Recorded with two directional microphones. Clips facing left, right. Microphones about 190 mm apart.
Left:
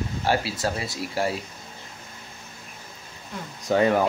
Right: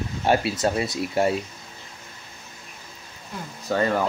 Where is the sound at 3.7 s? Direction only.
15° left (ahead or behind).